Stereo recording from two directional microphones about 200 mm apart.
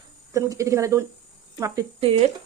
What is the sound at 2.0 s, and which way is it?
Speech, 30° right (ahead or behind).